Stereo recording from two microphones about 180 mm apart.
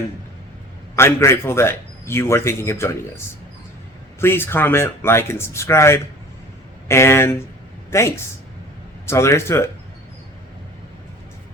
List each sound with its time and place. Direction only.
0.9 s speech: 15° left (ahead or behind)
4.2 s speech: 15° left (ahead or behind)